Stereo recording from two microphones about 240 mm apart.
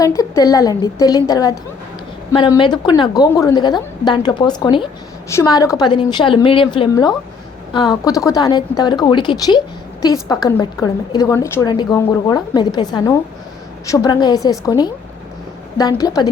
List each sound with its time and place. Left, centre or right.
0.0 s a woman's voice: centre